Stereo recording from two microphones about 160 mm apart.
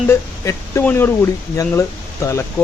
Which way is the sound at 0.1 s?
15° left (ahead or behind).